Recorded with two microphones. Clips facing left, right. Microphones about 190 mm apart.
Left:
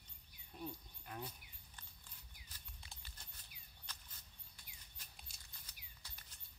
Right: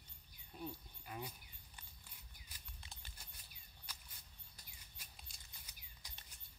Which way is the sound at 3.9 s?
10° right (ahead or behind).